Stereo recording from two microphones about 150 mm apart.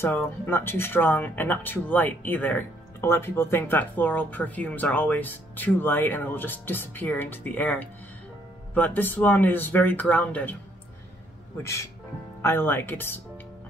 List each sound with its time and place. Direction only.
0.0 s speech: 15° left (ahead or behind)
11.6 s speech: 20° left (ahead or behind)